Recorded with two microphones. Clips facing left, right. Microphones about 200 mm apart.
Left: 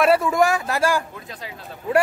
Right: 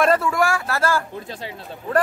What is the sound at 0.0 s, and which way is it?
A man's voice, 10° left (ahead or behind).